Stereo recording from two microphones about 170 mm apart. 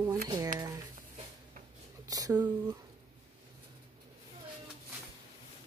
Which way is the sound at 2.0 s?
20° right (ahead or behind).